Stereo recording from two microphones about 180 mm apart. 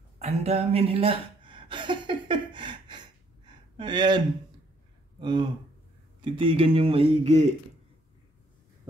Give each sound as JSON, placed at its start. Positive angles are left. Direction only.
{"t": 0.2, "sound": "speech", "side_deg": -35}
{"t": 3.4, "sound": "gasp", "side_deg": -25}
{"t": 5.2, "sound": "speech", "side_deg": -25}